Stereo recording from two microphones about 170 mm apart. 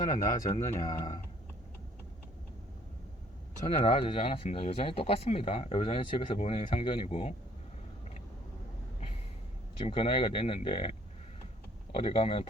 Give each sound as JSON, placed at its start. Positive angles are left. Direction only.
{"t": 0.0, "sound": "speech", "side_deg": 20}
{"t": 0.4, "sound": "speech", "side_deg": 35}
{"t": 3.8, "sound": "speech", "side_deg": 35}
{"t": 9.8, "sound": "speech", "side_deg": 35}
{"t": 11.9, "sound": "speech", "side_deg": 35}